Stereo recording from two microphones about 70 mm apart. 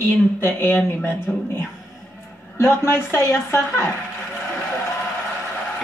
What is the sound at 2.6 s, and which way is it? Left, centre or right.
Speech, left.